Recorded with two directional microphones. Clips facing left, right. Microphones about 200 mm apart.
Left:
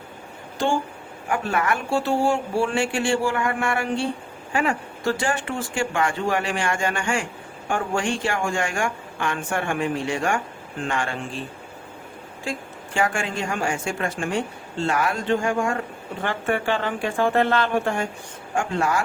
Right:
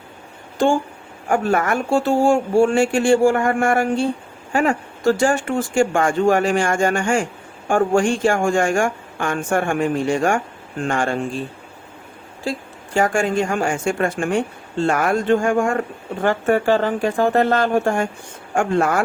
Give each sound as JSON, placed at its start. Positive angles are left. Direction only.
{"t": 1.3, "sound": "speech", "side_deg": -45}
{"t": 12.5, "sound": "speech", "side_deg": -40}